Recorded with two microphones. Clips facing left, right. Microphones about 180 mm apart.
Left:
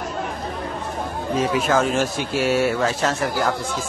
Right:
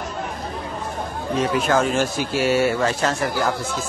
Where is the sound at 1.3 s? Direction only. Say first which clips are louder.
Even; centre (ahead or behind).